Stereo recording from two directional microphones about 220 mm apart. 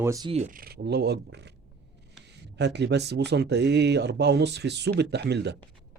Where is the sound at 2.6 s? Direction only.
50° right (ahead or behind).